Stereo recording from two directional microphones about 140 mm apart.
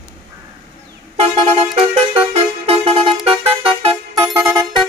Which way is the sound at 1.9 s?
45° right (ahead or behind).